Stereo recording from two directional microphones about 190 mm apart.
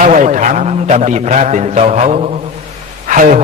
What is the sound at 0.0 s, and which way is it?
Mantra, 40° right (ahead or behind).